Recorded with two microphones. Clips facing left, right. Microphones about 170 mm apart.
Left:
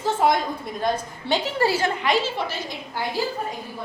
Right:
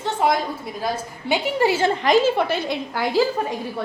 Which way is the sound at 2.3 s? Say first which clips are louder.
Right 7 dB; 60° right (ahead or behind).